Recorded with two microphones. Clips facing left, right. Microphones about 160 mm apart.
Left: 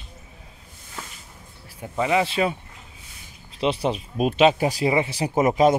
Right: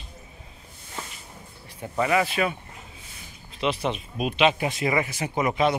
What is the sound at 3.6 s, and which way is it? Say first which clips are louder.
Speech: left 3 dB; 30° left (ahead or behind).